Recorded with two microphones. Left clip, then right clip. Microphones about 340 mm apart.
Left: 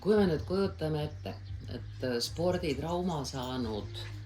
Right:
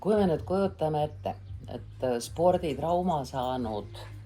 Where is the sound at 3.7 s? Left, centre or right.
Right.